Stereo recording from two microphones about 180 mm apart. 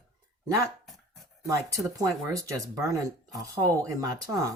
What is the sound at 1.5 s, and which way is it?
Speech, 20° right (ahead or behind).